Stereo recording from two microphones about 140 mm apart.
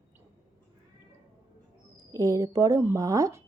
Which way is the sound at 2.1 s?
25° right (ahead or behind).